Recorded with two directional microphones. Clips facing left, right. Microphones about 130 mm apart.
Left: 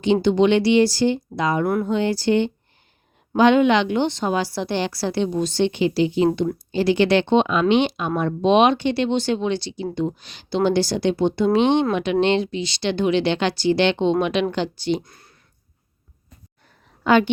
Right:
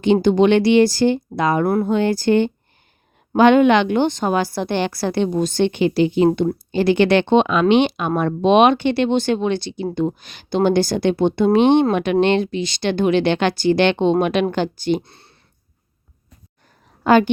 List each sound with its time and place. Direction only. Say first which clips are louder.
0.0 s a woman's voice: right 3 dB; 50° right (ahead or behind)
15.0 s a sound: right 1 dB; 30° right (ahead or behind)
17.0 s a woman's voice: right 3 dB; 45° right (ahead or behind)